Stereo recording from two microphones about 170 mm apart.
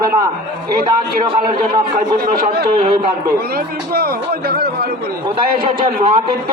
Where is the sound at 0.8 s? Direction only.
60° right (ahead or behind).